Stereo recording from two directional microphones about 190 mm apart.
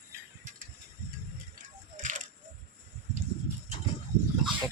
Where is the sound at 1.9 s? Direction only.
40° right (ahead or behind).